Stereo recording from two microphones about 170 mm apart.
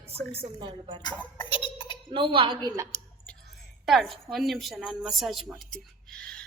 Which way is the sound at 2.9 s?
55° left (ahead or behind).